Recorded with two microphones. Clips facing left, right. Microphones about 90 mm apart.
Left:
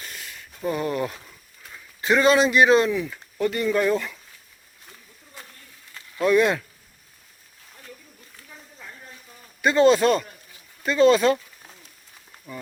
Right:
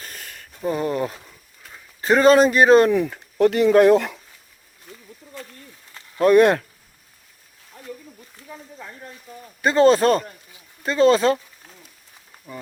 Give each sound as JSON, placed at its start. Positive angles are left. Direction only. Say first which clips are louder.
{"t": 0.0, "sound": "a sound", "louder": "right 1 dB", "side_deg": -45}
{"t": 0.7, "sound": "speech", "louder": "right 2 dB", "side_deg": -30}
{"t": 6.2, "sound": "speech", "louder": "right 5 dB", "side_deg": -55}
{"t": 9.6, "sound": "speech", "louder": "right 2 dB", "side_deg": -35}
{"t": 12.5, "sound": "speech", "louder": "right 1 dB", "side_deg": -20}